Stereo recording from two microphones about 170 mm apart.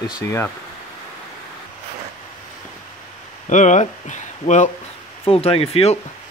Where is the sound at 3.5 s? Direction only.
45° left (ahead or behind).